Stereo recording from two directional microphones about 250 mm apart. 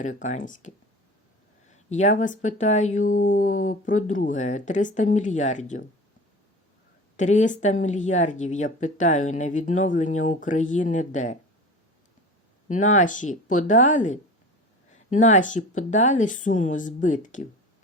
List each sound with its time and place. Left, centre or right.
0.0 s speech: left
1.9 s speech: left
7.2 s speech: left
12.6 s speech: left